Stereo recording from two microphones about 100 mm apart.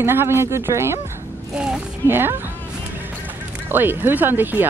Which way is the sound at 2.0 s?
20° right (ahead or behind).